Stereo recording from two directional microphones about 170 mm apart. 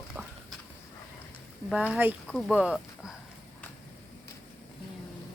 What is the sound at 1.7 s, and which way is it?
Speech, 5° right (ahead or behind).